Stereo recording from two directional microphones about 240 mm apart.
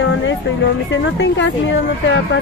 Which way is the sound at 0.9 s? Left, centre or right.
Left.